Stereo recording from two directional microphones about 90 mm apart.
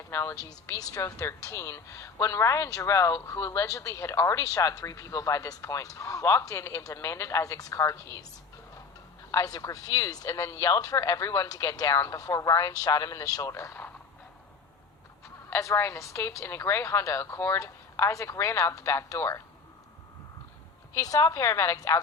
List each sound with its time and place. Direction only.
0.1 s speech: 30° left (ahead or behind)
0.3 s speech: 40° left (ahead or behind)
9.3 s speech: 40° left (ahead or behind)
13.7 s a sound: 20° left (ahead or behind)
15.4 s speech: 25° left (ahead or behind)
20.9 s speech: 40° left (ahead or behind)